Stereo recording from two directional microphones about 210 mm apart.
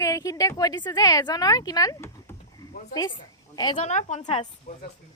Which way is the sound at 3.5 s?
20° left (ahead or behind).